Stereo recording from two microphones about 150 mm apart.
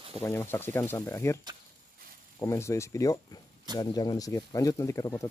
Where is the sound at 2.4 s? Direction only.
20° left (ahead or behind).